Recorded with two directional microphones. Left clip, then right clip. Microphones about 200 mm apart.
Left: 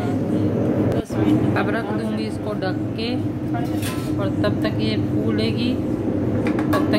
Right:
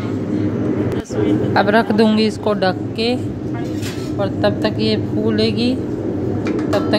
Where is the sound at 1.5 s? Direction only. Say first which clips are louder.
Right 8 dB; 30° right (ahead or behind).